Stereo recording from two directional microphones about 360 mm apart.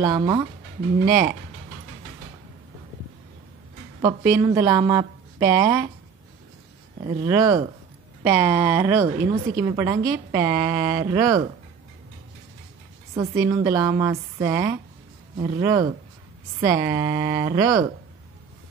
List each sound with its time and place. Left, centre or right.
0.0 s a woman's voice: centre
4.0 s a woman's voice: centre
7.0 s a woman's voice: centre
13.1 s a woman's voice: centre